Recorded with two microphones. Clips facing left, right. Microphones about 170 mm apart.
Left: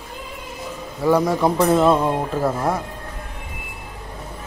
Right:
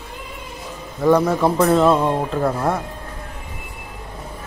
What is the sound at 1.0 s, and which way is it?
A man's voice, 10° left (ahead or behind).